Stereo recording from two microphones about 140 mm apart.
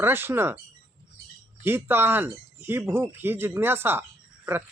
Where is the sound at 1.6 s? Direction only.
15° right (ahead or behind).